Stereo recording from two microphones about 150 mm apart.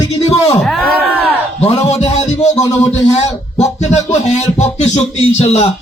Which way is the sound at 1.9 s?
50° left (ahead or behind).